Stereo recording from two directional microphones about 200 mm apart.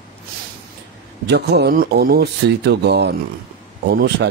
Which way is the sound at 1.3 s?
55° right (ahead or behind).